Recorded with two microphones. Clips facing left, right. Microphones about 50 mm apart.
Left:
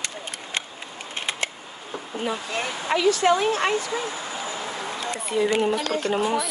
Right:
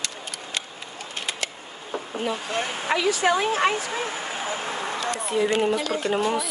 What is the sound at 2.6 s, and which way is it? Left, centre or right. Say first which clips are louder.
Speech: even; right.